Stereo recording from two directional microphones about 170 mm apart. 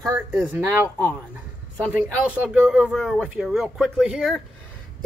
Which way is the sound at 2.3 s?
5° right (ahead or behind).